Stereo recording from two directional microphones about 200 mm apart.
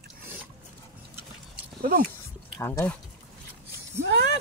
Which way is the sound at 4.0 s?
55° right (ahead or behind).